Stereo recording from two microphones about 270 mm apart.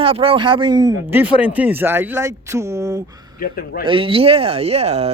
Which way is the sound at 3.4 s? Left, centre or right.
Left.